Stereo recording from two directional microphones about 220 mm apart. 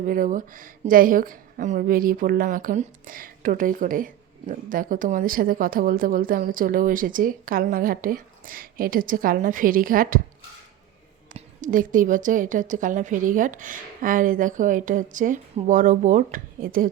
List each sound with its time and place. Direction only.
0.0 s a woman's voice: 40° right (ahead or behind)
11.3 s a woman's voice: 35° right (ahead or behind)